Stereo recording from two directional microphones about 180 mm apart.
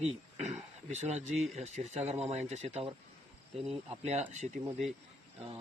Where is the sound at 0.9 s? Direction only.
40° right (ahead or behind).